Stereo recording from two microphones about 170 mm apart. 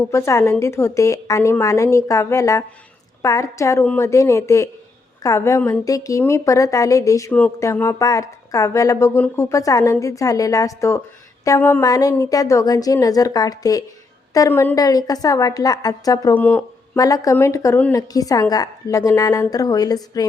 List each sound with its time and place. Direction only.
0.0 s a woman's voice: 15° left (ahead or behind)
16.3 s a woman's voice: 10° left (ahead or behind)